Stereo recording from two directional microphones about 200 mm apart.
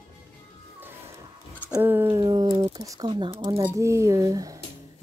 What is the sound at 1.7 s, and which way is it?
A woman's voice, 10° right (ahead or behind).